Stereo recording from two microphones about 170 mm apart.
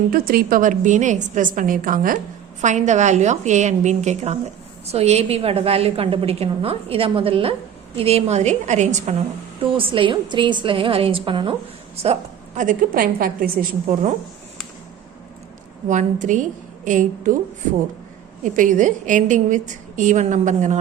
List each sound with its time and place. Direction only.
0.1 s a woman's voice: 60° right (ahead or behind); by 9.1 s 45° right (ahead or behind)
9.7 s a woman's voice: 30° right (ahead or behind)
12.5 s a woman's voice: 50° right (ahead or behind)
15.9 s a woman's voice: 45° right (ahead or behind)
18.4 s a woman's voice: 50° right (ahead or behind)